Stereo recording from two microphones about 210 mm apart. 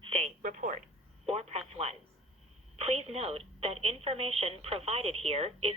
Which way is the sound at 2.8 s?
30° right (ahead or behind).